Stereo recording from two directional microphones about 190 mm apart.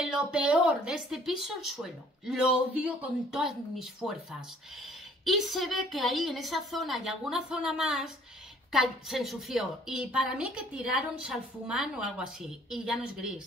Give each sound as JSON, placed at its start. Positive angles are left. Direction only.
{"t": 0.0, "sound": "a woman's voice", "side_deg": -5}